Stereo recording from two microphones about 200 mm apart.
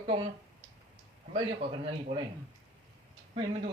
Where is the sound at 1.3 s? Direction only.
25° right (ahead or behind).